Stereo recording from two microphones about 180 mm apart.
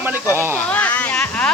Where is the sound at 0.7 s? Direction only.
10° left (ahead or behind).